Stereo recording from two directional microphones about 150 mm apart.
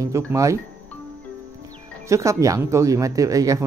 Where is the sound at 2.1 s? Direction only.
20° right (ahead or behind).